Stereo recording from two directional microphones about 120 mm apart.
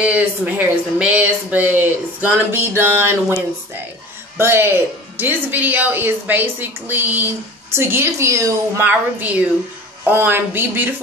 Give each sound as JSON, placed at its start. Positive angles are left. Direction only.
{"t": 0.0, "sound": "speech", "side_deg": -10}
{"t": 4.4, "sound": "a woman's voice", "side_deg": -20}
{"t": 8.8, "sound": "speech", "side_deg": -15}